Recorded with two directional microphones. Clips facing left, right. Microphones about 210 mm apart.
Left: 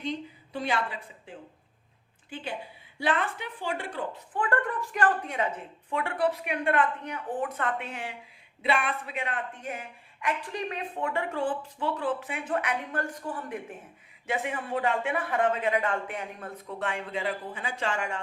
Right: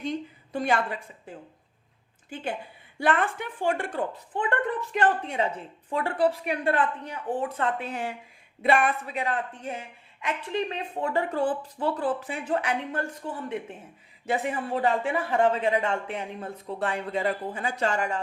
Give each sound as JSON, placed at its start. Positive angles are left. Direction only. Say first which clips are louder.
{"t": 0.0, "sound": "a woman's voice", "louder": "right 2 dB", "side_deg": -45}
{"t": 2.3, "sound": "a woman's voice", "louder": "right 3 dB", "side_deg": -50}
{"t": 4.4, "sound": "a woman's voice", "louder": "right 1 dB", "side_deg": -20}
{"t": 14.3, "sound": "a woman's voice", "louder": "right 3 dB", "side_deg": -35}